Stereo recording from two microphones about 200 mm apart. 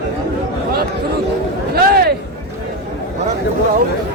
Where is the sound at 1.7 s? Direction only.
50° right (ahead or behind).